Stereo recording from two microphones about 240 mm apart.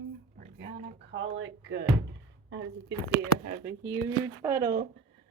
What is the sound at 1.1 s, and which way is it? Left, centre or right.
Speech, right.